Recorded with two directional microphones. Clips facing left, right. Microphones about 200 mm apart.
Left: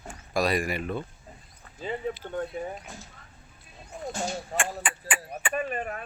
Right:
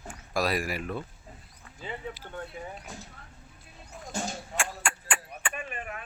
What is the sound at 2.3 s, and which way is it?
Speech, 35° left (ahead or behind).